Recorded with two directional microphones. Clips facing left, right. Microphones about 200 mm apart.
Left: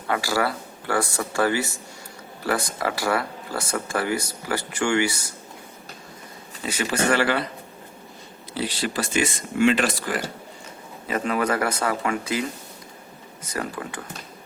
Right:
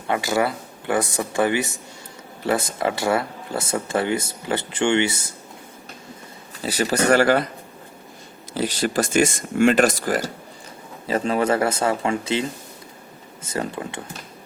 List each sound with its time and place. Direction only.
0.1 s speech: 20° right (ahead or behind)
6.6 s speech: 35° right (ahead or behind)
8.5 s speech: 45° right (ahead or behind)
11.1 s speech: 30° right (ahead or behind)